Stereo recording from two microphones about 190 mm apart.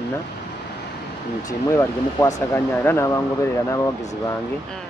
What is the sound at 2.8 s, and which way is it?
Speech, 15° left (ahead or behind).